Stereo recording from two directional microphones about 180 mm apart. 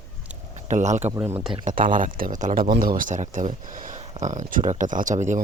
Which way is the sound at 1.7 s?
50° right (ahead or behind).